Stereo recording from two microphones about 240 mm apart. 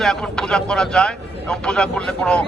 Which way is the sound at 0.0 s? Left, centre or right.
Centre.